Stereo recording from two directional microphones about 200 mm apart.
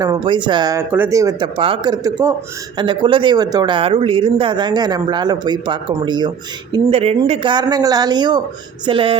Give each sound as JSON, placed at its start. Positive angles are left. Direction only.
{"t": 0.0, "sound": "speech", "side_deg": -20}